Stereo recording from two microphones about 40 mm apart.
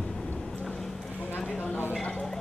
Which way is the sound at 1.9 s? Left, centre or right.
Centre.